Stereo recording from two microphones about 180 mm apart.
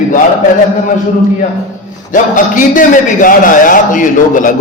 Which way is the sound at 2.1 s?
45° left (ahead or behind).